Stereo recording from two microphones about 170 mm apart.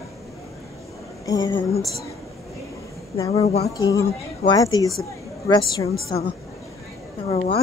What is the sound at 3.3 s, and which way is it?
Speech, 40° left (ahead or behind).